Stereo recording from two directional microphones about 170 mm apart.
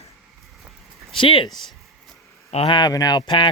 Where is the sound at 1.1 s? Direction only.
30° left (ahead or behind).